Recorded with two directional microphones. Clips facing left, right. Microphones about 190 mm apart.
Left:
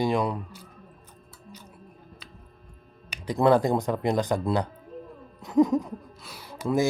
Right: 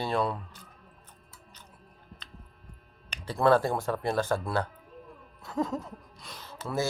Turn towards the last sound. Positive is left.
turn(degrees=15)  # may be behind; listen again after turning